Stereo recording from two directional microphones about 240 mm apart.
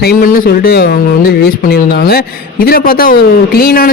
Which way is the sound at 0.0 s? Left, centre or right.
Left.